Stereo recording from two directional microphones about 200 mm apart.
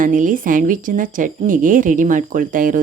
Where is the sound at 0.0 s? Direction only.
40° right (ahead or behind).